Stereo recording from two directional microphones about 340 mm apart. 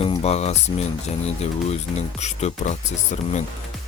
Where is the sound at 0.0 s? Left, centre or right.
Centre.